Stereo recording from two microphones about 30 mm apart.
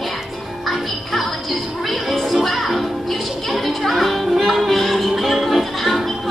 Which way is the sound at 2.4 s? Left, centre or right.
Centre.